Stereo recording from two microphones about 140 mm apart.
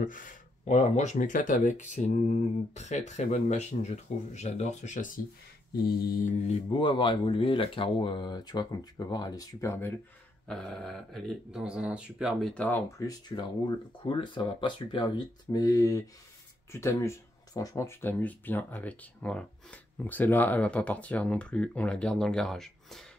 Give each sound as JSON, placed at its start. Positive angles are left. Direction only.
{"t": 0.0, "sound": "speech", "side_deg": 70}
{"t": 5.9, "sound": "mantra", "side_deg": 90}
{"t": 6.4, "sound": "speech", "side_deg": 50}
{"t": 6.8, "sound": "speech", "side_deg": 35}
{"t": 10.5, "sound": "speech", "side_deg": 5}
{"t": 12.6, "sound": "speech", "side_deg": 20}